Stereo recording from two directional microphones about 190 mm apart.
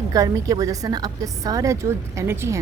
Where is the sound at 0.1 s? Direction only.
20° right (ahead or behind).